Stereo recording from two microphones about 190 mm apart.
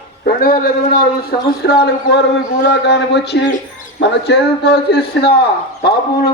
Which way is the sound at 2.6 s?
65° left (ahead or behind).